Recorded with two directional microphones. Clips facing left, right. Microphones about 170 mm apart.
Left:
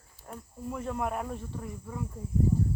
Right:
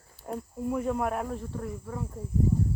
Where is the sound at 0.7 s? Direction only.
10° right (ahead or behind).